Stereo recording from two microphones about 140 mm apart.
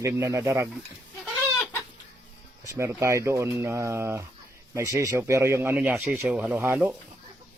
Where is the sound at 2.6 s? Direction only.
25° right (ahead or behind).